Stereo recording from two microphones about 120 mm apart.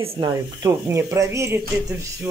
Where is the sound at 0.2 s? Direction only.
35° right (ahead or behind).